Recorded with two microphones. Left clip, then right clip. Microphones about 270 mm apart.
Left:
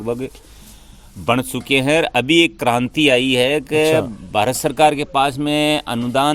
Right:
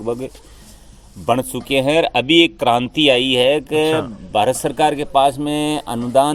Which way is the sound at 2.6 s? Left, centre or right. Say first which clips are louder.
Right 2 dB; left.